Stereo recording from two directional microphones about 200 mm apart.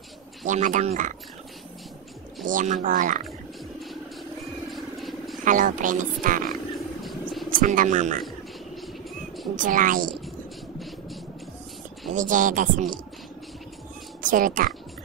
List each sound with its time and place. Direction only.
0.5 s speech: 40° right (ahead or behind)
2.4 s speech: 40° right (ahead or behind)
4.7 s vehicle: centre (ahead or behind)
5.4 s speech: 40° right (ahead or behind)
7.0 s a sound: centre (ahead or behind)
7.4 s speech: 45° right (ahead or behind)
9.6 s a woman's voice: 40° right (ahead or behind)
12.1 s speech: 40° right (ahead or behind)
14.2 s speech: 40° right (ahead or behind)